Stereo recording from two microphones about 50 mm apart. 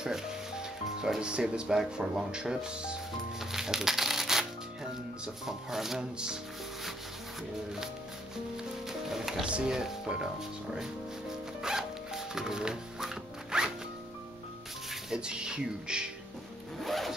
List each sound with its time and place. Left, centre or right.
0.0 s music: centre
2.0 s speech: centre
3.3 s music: centre
5.2 s speech: centre
8.8 s music: centre
9.4 s speech: centre
10.7 s music: centre
14.9 s speech: centre
16.8 s zipper: centre